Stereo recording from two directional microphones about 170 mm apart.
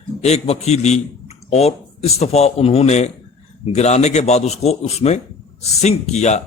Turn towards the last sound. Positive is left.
turn(degrees=40)  # may be behind; listen again after turning